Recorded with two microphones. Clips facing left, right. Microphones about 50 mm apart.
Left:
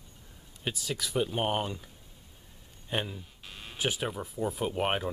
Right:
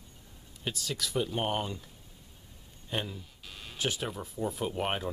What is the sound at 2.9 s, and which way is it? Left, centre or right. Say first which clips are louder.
Speech: left 2 dB; centre.